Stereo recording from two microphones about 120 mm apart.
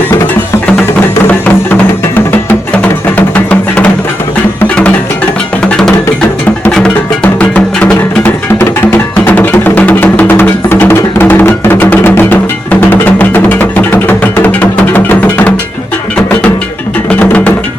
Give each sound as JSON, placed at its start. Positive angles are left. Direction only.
{"t": 1.3, "sound": "music", "side_deg": 10}
{"t": 6.7, "sound": "music", "side_deg": 10}
{"t": 17.2, "sound": "music", "side_deg": 15}